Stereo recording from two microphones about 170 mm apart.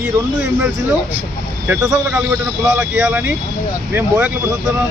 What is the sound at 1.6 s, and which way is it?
A man's voice, 5° right (ahead or behind).